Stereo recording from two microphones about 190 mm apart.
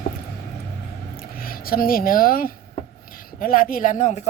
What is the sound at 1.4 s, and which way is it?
Speech, 50° left (ahead or behind).